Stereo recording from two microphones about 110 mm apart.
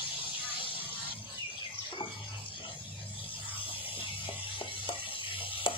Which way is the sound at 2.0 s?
50° left (ahead or behind).